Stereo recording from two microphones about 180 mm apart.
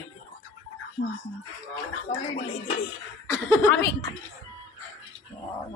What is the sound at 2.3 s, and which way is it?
Speech, 45° left (ahead or behind).